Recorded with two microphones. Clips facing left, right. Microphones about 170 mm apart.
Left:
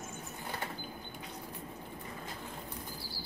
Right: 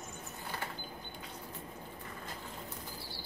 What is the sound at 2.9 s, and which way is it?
Bird flight, centre (ahead or behind).